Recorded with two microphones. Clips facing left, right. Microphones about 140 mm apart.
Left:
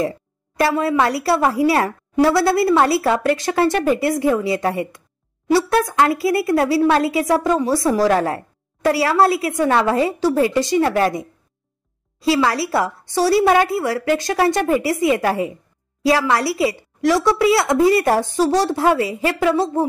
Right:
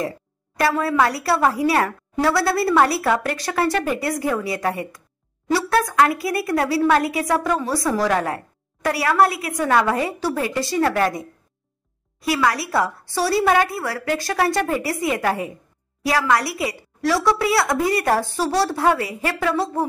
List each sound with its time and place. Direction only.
0.6 s a woman's voice: 25° left (ahead or behind)